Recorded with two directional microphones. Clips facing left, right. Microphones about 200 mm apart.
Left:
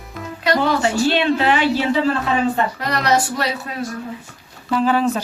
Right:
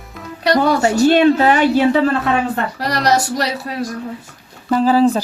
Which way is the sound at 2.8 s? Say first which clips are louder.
Right 2 dB; 35° right (ahead or behind).